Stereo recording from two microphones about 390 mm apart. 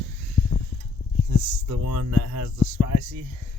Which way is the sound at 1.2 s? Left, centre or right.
Right.